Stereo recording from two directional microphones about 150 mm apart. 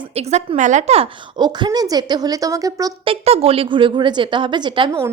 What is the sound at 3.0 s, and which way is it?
Speech, 40° right (ahead or behind).